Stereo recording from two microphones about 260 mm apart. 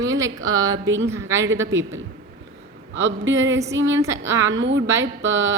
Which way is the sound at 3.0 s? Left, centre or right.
Right.